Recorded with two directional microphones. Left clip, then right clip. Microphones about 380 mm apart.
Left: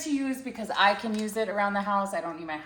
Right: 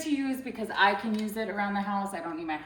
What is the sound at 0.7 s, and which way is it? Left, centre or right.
A woman's voice, centre.